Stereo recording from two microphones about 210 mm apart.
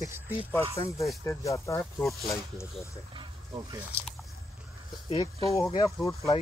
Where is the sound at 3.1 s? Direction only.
15° right (ahead or behind).